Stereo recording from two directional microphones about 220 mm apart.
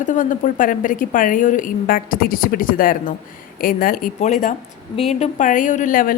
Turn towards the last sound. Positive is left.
turn(degrees=40)  # may be behind; listen again after turning